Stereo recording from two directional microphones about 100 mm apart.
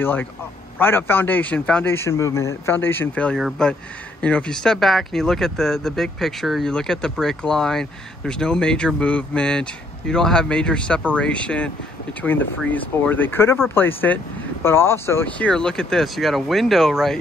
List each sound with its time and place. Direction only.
0.0 s speech: 20° left (ahead or behind)
2.0 s speech: 30° left (ahead or behind)
3.6 s speech: 5° left (ahead or behind); by 15.2 s 25° left (ahead or behind)
15.2 s speech: 15° left (ahead or behind)